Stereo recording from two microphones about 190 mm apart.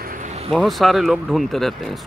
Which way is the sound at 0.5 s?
Centre (ahead or behind).